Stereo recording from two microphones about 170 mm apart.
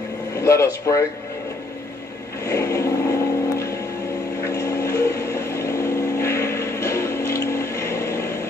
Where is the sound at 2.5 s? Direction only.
15° left (ahead or behind).